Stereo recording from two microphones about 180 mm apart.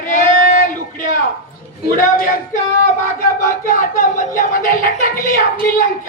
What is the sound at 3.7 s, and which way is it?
Speech, 50° left (ahead or behind).